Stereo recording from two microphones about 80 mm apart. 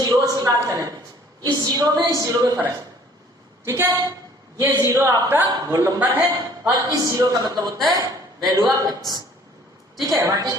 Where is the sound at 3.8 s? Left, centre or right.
Right.